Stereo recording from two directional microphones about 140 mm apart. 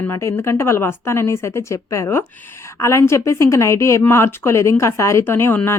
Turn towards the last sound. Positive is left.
turn(degrees=15)  # may be behind; listen again after turning